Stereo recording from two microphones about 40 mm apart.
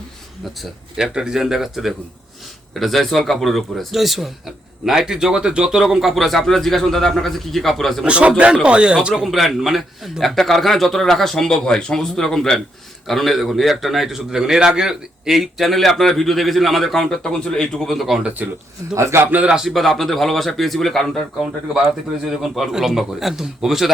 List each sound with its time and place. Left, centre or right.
1.1 s a man's voice: centre
4.9 s speech: centre
5.8 s a man's voice: centre
8.0 s speech: right
9.2 s a man's voice: centre
14.3 s a man's voice: centre
17.7 s a man's voice: centre
18.4 s speech: right
19.6 s a man's voice: centre
21.3 s speech: centre